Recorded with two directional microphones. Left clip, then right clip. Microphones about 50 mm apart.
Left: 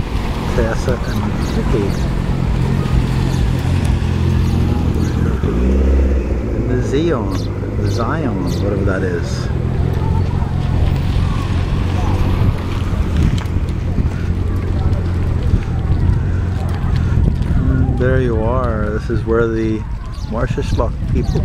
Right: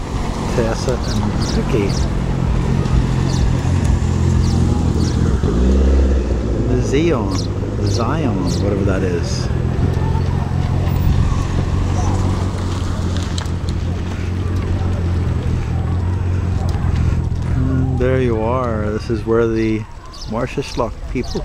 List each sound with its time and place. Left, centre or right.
0.6 s speech: right
4.3 s vehicle: right
5.4 s speech: right
18.0 s speech: right
18.3 s speech: right
19.0 s speech: right